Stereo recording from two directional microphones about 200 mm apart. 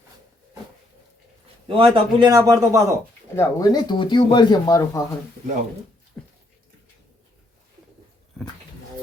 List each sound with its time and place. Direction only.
1.6 s a man's voice: 25° right (ahead or behind)
3.3 s speech: 20° left (ahead or behind)